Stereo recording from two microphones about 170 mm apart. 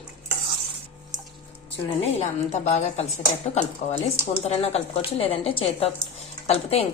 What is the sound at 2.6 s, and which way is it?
Speech, 40° left (ahead or behind).